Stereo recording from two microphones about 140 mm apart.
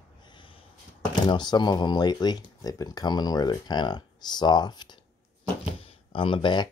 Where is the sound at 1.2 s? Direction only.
30° left (ahead or behind).